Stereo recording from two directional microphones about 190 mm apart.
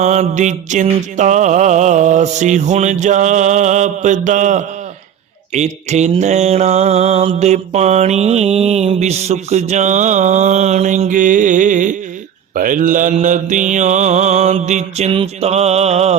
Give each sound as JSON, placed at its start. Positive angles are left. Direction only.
{"t": 0.0, "sound": "mantra", "side_deg": -40}